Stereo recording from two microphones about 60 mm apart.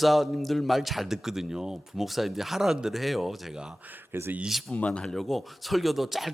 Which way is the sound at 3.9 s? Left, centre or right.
Right.